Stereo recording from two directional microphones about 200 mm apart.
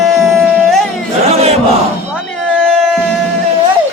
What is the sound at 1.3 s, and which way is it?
Crowd, 30° right (ahead or behind).